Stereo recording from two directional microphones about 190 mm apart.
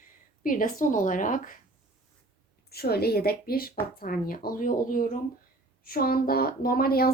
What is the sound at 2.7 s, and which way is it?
A woman's voice, 55° left (ahead or behind).